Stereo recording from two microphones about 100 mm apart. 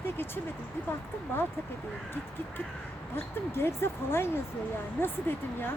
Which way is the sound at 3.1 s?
25° left (ahead or behind).